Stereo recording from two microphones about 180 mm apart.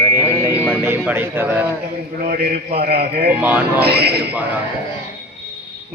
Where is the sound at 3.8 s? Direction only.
60° right (ahead or behind).